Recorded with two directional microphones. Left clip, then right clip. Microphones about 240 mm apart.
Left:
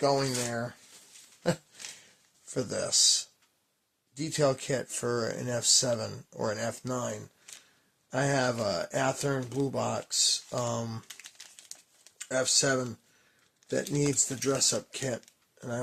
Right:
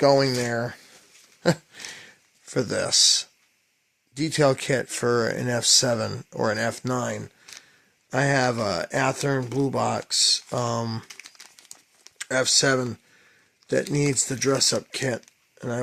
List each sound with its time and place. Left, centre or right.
0.0 s speech: right
1.5 s a sound: right
2.5 s speech: right
12.1 s speech: right